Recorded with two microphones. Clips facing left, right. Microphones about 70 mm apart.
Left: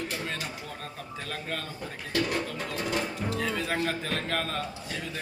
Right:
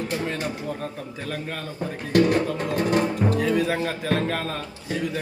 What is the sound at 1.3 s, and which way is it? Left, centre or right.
Speech, centre.